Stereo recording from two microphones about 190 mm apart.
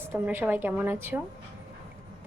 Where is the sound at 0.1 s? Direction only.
10° right (ahead or behind).